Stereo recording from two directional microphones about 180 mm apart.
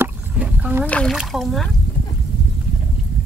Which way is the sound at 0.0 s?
5° right (ahead or behind).